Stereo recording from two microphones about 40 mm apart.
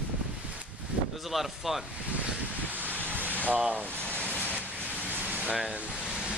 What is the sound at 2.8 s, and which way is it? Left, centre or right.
Wind, right.